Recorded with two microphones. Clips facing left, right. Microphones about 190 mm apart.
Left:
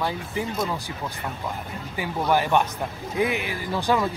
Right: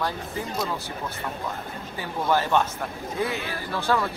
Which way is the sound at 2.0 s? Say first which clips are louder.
Left 2 dB; 15° left (ahead or behind).